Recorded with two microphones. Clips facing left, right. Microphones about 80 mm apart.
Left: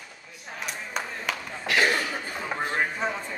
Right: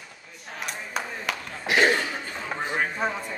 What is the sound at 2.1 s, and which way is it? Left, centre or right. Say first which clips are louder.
Chatter: left 1 dB; centre.